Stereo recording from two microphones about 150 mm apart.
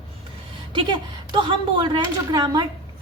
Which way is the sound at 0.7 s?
30° right (ahead or behind).